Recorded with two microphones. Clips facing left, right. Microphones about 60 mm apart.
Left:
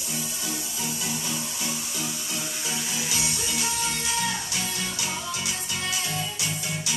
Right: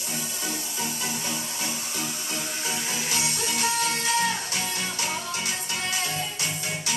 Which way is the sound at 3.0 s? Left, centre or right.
Right.